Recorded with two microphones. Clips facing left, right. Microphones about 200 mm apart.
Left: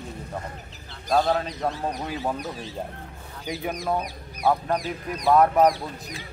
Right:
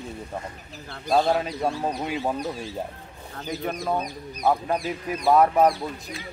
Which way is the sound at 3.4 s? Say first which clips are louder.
Even; 15° left (ahead or behind).